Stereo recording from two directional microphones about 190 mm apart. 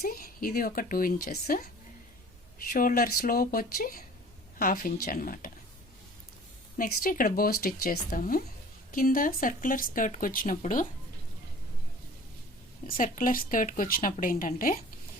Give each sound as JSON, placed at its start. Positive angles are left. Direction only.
{"t": 0.0, "sound": "speech", "side_deg": 50}
{"t": 2.6, "sound": "speech", "side_deg": 45}
{"t": 6.7, "sound": "speech", "side_deg": 50}
{"t": 12.9, "sound": "speech", "side_deg": 45}